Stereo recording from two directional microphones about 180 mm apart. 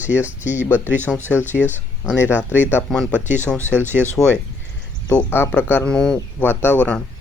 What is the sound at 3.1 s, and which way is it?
Speech, 10° right (ahead or behind).